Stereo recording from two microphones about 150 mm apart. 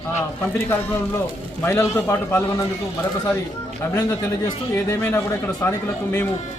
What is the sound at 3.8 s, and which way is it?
Speech, 15° left (ahead or behind).